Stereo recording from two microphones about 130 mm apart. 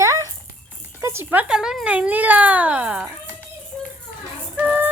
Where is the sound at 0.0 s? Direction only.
25° right (ahead or behind).